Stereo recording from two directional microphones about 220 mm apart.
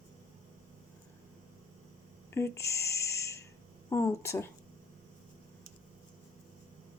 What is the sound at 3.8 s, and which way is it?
Speech, 15° left (ahead or behind).